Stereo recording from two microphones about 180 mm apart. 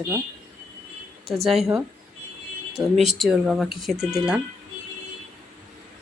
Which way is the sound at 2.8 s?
15° right (ahead or behind).